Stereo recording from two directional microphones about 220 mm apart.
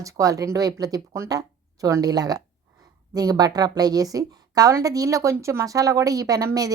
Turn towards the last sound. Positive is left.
turn(degrees=-15)  # may be behind; listen again after turning